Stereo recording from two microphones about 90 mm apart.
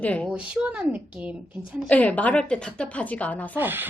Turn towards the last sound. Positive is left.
turn(degrees=-25)  # may be behind; listen again after turning